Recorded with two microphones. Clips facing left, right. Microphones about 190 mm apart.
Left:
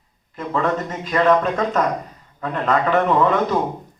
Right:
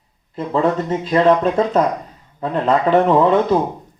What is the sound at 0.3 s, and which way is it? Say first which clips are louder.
Speech: right 4 dB; 30° right (ahead or behind).